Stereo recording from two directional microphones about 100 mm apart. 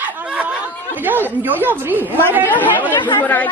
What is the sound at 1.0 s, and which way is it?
A woman's voice, 20° right (ahead or behind).